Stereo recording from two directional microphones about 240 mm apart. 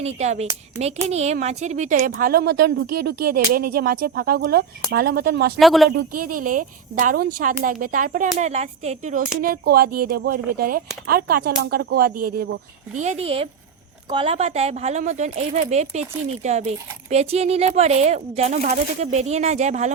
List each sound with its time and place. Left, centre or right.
0.2 s speech: right
5.5 s speech: centre
6.4 s speech: right
13.0 s speech: right